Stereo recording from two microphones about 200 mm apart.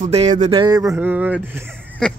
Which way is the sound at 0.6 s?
20° right (ahead or behind).